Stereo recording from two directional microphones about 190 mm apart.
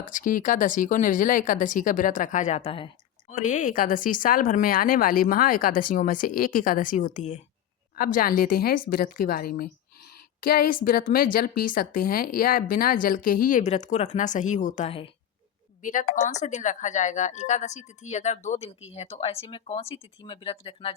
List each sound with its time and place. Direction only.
0.0 s a woman's voice: 45° left (ahead or behind); by 2.9 s 30° left (ahead or behind)
3.2 s a woman's voice: 40° left (ahead or behind)
15.8 s speech: 40° left (ahead or behind)